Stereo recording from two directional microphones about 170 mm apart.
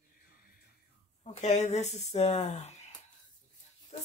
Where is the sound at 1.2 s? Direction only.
45° left (ahead or behind).